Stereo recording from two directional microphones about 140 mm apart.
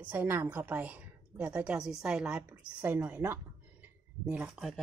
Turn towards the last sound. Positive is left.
turn(degrees=-15)  # may be behind; listen again after turning